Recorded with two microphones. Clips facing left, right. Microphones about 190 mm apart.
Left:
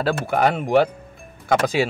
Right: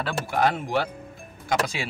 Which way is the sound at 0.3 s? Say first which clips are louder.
Left 5 dB; 60° left (ahead or behind).